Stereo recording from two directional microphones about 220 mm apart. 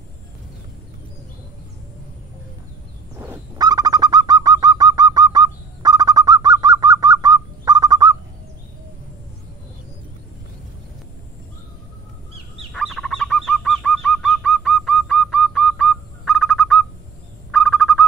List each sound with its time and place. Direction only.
3.2 s bird: 15° right (ahead or behind)
12.7 s bird: centre (ahead or behind)
17.5 s owl: centre (ahead or behind)